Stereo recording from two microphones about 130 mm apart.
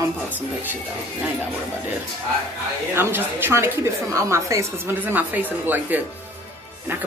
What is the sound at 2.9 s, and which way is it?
A woman's voice, 15° right (ahead or behind).